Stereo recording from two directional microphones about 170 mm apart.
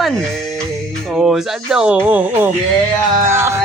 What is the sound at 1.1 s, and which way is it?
Speech, 5° right (ahead or behind).